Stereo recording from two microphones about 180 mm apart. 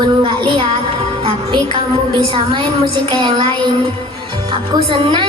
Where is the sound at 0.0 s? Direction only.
25° right (ahead or behind).